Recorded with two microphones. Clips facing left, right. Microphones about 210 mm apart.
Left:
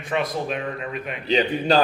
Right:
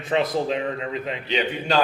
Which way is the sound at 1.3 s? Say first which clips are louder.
Left 5 dB; 35° left (ahead or behind).